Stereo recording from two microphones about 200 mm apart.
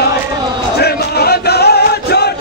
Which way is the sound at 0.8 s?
55° left (ahead or behind).